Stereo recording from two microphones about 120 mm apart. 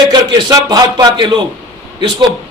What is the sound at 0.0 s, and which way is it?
Speech, 35° right (ahead or behind).